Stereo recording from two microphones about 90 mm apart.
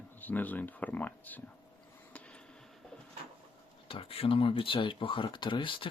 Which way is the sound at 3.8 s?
90° left.